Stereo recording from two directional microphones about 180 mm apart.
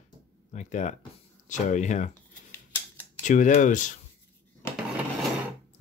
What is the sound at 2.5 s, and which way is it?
Scissors, 10° left (ahead or behind).